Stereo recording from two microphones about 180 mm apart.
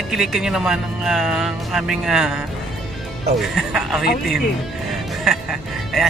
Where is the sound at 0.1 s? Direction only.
5° right (ahead or behind).